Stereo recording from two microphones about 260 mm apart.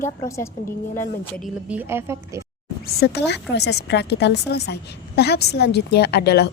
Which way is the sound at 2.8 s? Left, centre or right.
Left.